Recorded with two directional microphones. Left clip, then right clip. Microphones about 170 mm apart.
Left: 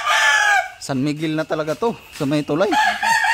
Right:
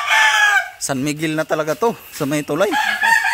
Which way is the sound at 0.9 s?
Centre (ahead or behind).